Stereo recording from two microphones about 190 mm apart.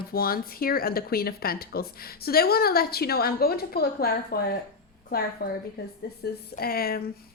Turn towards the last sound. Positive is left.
turn(degrees=50)  # may be behind; listen again after turning